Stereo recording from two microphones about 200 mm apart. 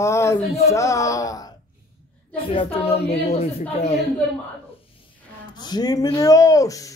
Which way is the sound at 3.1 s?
30° left (ahead or behind).